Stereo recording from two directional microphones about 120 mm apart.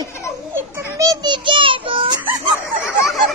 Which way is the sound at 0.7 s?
25° right (ahead or behind).